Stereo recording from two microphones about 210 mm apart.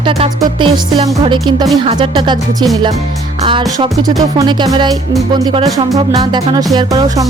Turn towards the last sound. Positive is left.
turn(degrees=-20)  # may be behind; listen again after turning